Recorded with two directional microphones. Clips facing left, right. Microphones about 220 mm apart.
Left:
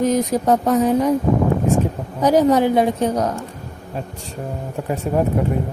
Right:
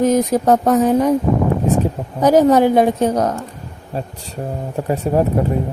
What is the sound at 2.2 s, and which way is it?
Speech, 45° right (ahead or behind).